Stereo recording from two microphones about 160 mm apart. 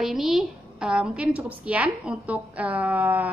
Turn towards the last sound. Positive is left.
turn(degrees=-10)  # may be behind; listen again after turning